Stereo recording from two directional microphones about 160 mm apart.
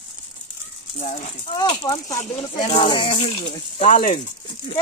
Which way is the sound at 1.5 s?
25° left (ahead or behind).